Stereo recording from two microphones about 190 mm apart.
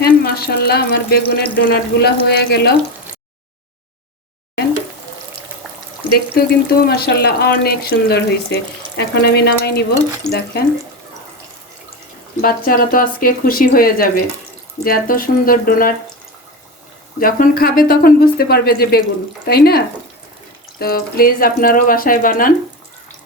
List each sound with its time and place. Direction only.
0.0 s speech: 55° left (ahead or behind)
6.1 s speech: 55° left (ahead or behind)
12.4 s speech: 50° left (ahead or behind)
17.2 s speech: 50° left (ahead or behind)